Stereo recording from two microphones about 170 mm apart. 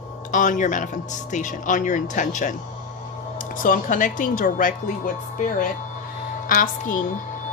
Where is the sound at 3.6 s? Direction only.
50° left (ahead or behind).